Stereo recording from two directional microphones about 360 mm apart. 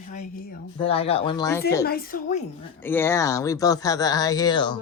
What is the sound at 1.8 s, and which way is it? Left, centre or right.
Speech, left.